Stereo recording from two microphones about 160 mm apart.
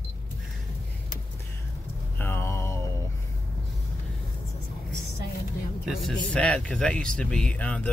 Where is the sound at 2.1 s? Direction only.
15° left (ahead or behind).